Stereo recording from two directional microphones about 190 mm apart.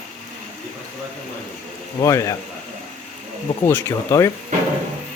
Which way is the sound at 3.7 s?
15° left (ahead or behind).